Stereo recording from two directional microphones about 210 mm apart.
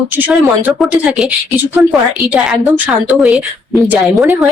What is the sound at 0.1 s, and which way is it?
A woman's voice, 10° right (ahead or behind).